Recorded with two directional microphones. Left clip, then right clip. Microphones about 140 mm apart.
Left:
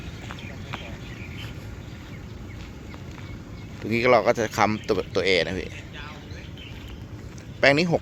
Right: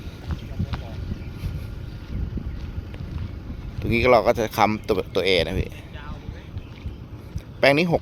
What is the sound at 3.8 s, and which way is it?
Speech, 15° right (ahead or behind).